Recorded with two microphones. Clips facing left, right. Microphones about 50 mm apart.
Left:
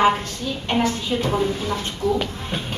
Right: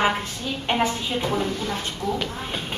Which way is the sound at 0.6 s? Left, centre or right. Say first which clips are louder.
Left 2 dB; centre.